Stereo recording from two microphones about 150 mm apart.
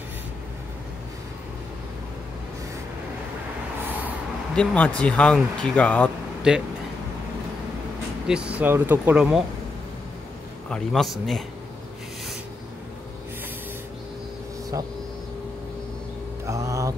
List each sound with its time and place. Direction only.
4.6 s speech: 10° left (ahead or behind)
6.5 s a man's voice: 5° right (ahead or behind)
8.3 s speech: 5° right (ahead or behind)
10.7 s a man's voice: centre (ahead or behind)
16.4 s mantra: 20° right (ahead or behind)